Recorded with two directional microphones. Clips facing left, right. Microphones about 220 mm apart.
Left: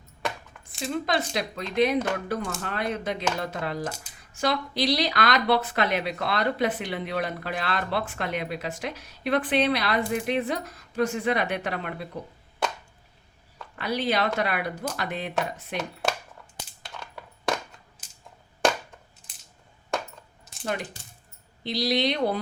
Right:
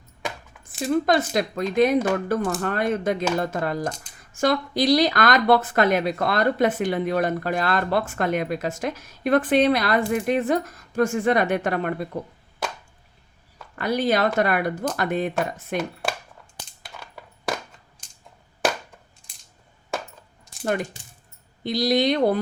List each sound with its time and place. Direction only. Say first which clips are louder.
0.3 s a sound: left 1 dB; centre (ahead or behind)
0.9 s speech: right 7 dB; 45° right (ahead or behind)
3.8 s speech: right 4 dB; 5° left (ahead or behind)
4.3 s speech: right 5 dB; 50° right (ahead or behind)
13.7 s speech: right 4 dB; 45° right (ahead or behind)
16.8 s a sound: even; 5° right (ahead or behind)
21.6 s speech: right 4 dB; 45° right (ahead or behind)